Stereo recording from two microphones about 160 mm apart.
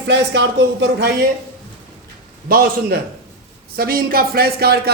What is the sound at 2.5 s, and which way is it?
A man's voice, 70° right (ahead or behind).